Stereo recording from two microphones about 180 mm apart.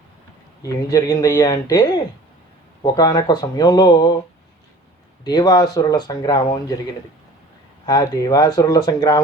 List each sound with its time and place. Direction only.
0.6 s speech: 20° left (ahead or behind)
5.2 s speech: 20° left (ahead or behind)
7.9 s speech: 20° left (ahead or behind)